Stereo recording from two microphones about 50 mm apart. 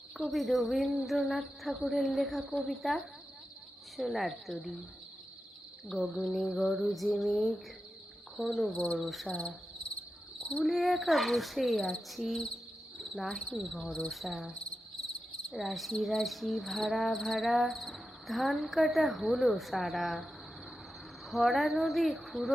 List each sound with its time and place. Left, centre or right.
0.2 s cricket: centre
6.0 s cricket: centre
8.7 s speech: centre
9.0 s cricket: centre
9.3 s speech: centre
10.6 s cricket: centre
13.0 s speech: centre
13.5 s cricket: centre
15.5 s cricket: centre
21.2 s cricket: centre